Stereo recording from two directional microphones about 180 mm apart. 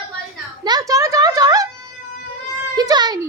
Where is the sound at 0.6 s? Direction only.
20° right (ahead or behind).